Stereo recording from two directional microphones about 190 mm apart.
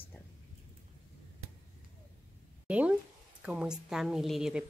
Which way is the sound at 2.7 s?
5° right (ahead or behind).